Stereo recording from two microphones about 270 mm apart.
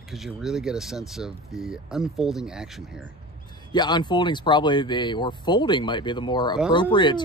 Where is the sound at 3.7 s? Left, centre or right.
Centre.